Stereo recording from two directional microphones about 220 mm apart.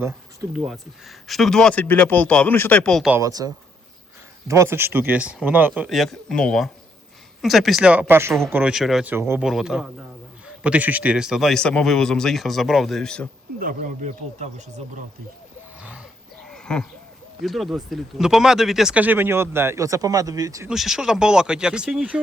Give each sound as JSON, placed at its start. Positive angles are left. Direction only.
{"t": 0.5, "sound": "speech", "side_deg": 0}
{"t": 3.2, "sound": "speech", "side_deg": -15}
{"t": 13.6, "sound": "speech", "side_deg": -40}
{"t": 15.8, "sound": "a sound", "side_deg": -5}
{"t": 17.4, "sound": "speech", "side_deg": 0}
{"t": 20.7, "sound": "speech", "side_deg": 0}